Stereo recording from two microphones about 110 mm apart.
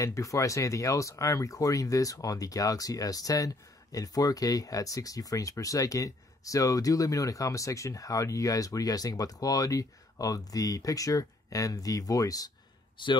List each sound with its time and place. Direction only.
0.0 s speech: 30° left (ahead or behind)
12.9 s a man's voice: 45° left (ahead or behind)